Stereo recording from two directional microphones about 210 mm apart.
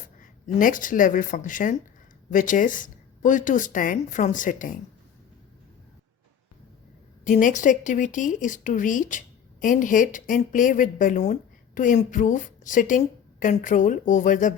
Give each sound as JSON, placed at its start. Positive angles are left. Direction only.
{"t": 0.2, "sound": "speech", "side_deg": 40}
{"t": 7.3, "sound": "speech", "side_deg": 40}